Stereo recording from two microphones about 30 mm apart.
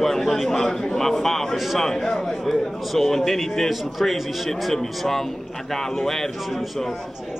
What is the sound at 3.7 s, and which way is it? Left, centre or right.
A man's voice, centre.